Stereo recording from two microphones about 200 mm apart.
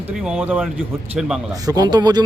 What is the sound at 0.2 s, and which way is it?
Speech, 5° right (ahead or behind).